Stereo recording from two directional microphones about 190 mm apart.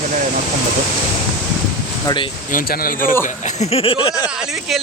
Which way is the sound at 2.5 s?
50° left (ahead or behind).